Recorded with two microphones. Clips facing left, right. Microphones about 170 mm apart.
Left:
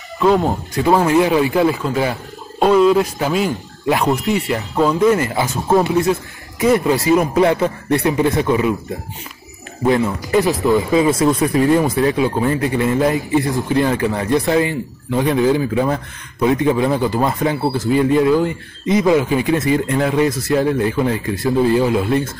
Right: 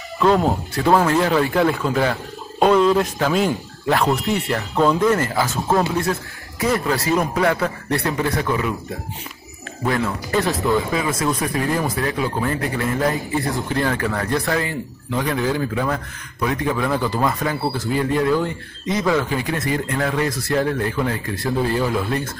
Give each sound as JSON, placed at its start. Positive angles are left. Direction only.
{"t": 0.2, "sound": "speech", "side_deg": 0}
{"t": 0.9, "sound": "speech", "side_deg": 15}
{"t": 1.5, "sound": "speech", "side_deg": 0}
{"t": 5.0, "sound": "speech", "side_deg": 10}
{"t": 7.3, "sound": "speech", "side_deg": 25}
{"t": 9.8, "sound": "speech", "side_deg": 20}